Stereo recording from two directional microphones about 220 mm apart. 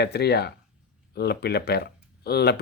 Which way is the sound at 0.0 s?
50° left (ahead or behind).